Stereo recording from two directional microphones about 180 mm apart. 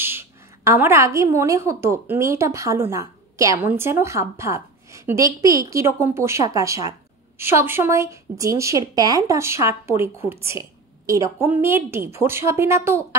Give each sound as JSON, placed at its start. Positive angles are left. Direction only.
{"t": 0.0, "sound": "a woman's voice", "side_deg": -15}